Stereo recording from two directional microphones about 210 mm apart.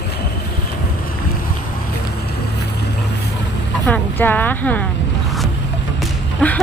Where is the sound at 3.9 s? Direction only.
10° left (ahead or behind).